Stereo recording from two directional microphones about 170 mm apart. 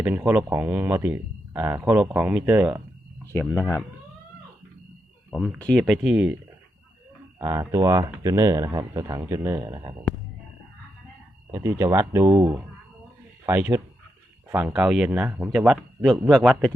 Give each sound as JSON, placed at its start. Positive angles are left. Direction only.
{"t": 0.0, "sound": "speech", "side_deg": -10}
{"t": 3.3, "sound": "speech", "side_deg": 20}
{"t": 5.5, "sound": "speech", "side_deg": 5}
{"t": 7.3, "sound": "speech", "side_deg": -20}
{"t": 11.5, "sound": "speech", "side_deg": -15}